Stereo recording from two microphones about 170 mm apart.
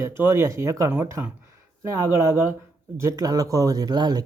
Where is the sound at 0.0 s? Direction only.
15° right (ahead or behind).